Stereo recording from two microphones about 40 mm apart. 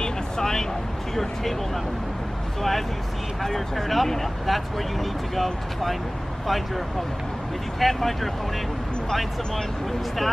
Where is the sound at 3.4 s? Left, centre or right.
Centre.